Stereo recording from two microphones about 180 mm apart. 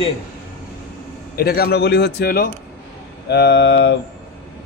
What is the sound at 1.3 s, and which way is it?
A man's voice, 60° left (ahead or behind).